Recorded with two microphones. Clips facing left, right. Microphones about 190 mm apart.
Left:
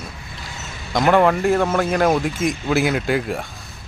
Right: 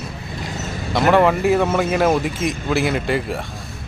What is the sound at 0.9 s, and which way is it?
Speech, centre (ahead or behind).